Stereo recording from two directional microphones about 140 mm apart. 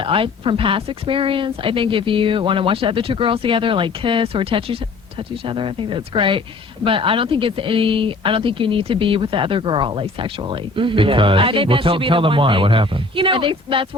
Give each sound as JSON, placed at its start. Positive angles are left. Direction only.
{"t": 0.0, "sound": "speech", "side_deg": -40}